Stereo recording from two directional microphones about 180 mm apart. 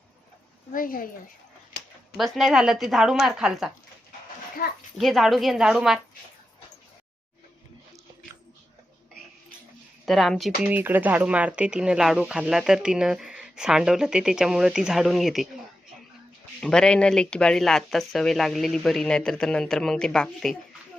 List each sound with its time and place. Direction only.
0.7 s a woman's voice: 50° left (ahead or behind)
1.7 s a sound: 75° left (ahead or behind)
2.1 s speech: centre (ahead or behind)
4.6 s a woman's voice: 55° left (ahead or behind)
4.9 s speech: centre (ahead or behind)
10.1 s speech: centre (ahead or behind)
10.6 s speech: 10° right (ahead or behind)
16.6 s speech: 5° left (ahead or behind)